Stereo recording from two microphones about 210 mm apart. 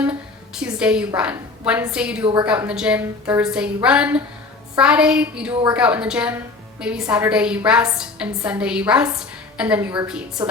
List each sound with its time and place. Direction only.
0.0 s a woman's voice: 5° right (ahead or behind)
2.2 s a woman's voice: 20° right (ahead or behind)
2.5 s a woman's voice: 5° right (ahead or behind)